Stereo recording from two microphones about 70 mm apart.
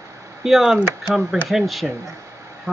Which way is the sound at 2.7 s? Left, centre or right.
Right.